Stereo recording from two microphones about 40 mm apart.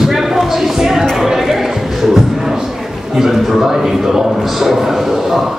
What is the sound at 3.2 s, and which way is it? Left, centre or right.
A man's voice, centre.